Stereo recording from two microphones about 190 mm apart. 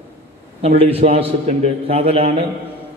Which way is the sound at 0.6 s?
30° right (ahead or behind).